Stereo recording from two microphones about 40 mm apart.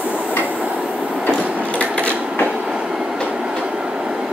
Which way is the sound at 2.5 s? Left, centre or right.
Centre.